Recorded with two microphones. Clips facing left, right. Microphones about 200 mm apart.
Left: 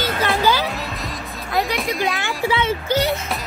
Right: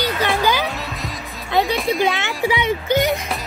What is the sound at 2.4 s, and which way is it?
Speech, 15° right (ahead or behind).